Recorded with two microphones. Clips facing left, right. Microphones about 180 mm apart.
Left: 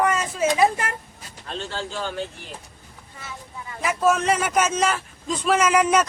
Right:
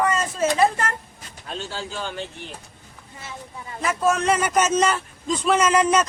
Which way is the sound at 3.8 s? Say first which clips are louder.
Left 1 dB; 5° left (ahead or behind).